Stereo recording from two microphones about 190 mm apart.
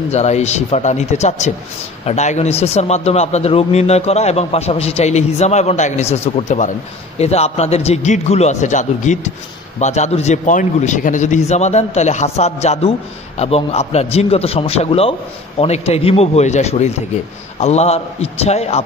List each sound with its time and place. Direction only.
0.1 s speech: 35° left (ahead or behind)